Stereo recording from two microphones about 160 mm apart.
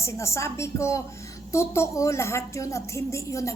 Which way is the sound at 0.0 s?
20° left (ahead or behind).